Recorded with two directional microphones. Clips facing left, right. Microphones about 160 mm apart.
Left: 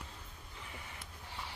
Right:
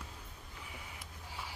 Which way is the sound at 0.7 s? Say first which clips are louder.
Even; 10° right (ahead or behind).